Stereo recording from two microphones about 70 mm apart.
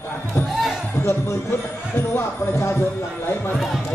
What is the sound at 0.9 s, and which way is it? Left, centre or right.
Speech, left.